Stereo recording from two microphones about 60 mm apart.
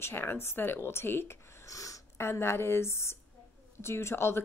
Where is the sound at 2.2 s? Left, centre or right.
Left.